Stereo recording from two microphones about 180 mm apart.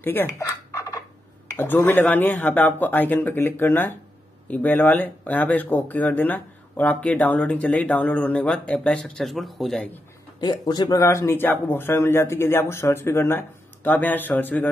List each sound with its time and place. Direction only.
0.0 s fowl: 10° left (ahead or behind)
1.5 s speech: 10° left (ahead or behind)
10.4 s speech: 25° left (ahead or behind)